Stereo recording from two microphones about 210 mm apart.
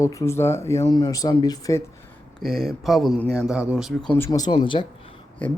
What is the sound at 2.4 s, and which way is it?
Speech, centre (ahead or behind).